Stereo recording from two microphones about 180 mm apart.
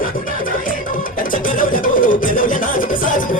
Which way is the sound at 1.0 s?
50° left (ahead or behind).